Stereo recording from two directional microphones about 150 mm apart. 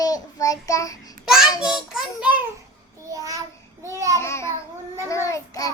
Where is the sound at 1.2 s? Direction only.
5° right (ahead or behind).